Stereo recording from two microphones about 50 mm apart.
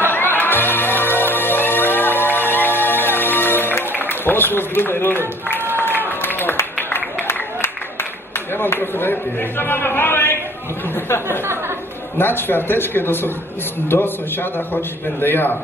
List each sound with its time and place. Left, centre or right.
0.1 s music: left
3.9 s speech: left
5.9 s a sound: left
8.5 s a man's voice: left
12.2 s a man's voice: left